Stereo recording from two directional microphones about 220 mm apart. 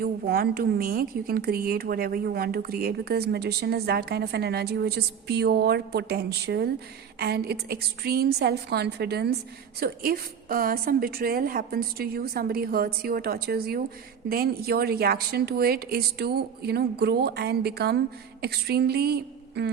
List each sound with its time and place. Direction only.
0.0 s a woman's voice: 45° right (ahead or behind)